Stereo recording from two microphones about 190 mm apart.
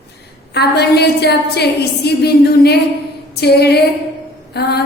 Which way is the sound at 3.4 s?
60° left (ahead or behind).